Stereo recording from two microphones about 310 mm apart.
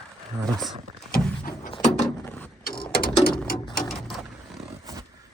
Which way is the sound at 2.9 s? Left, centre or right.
Left.